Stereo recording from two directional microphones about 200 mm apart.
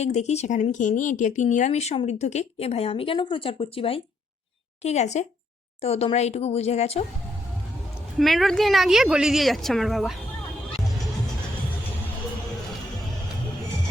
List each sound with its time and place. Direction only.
0.0 s speech: 35° left (ahead or behind)
8.2 s speech: centre (ahead or behind)